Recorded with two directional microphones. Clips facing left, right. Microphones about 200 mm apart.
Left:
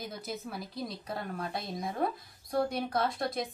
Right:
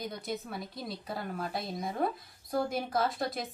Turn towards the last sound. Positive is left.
turn(degrees=0)  # may be behind; listen again after turning